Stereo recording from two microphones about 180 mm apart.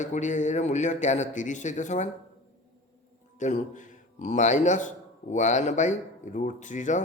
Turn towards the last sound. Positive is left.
turn(degrees=45)  # may be behind; listen again after turning